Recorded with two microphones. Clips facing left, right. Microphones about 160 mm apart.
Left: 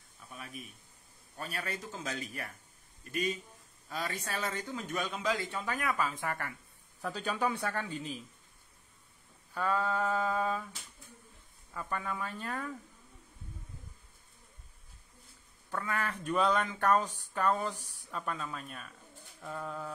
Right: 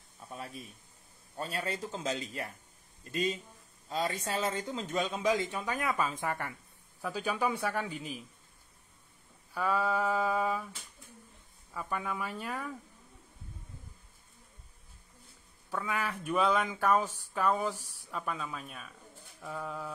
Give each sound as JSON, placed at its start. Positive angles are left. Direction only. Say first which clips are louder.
{"t": 0.3, "sound": "speech", "louder": "right 3 dB", "side_deg": -30}
{"t": 7.0, "sound": "speech", "louder": "right 1 dB", "side_deg": -5}
{"t": 9.5, "sound": "speech", "louder": "right 1 dB", "side_deg": -10}
{"t": 11.7, "sound": "speech", "louder": "right 1 dB", "side_deg": -10}
{"t": 15.7, "sound": "speech", "louder": "right 1 dB", "side_deg": -10}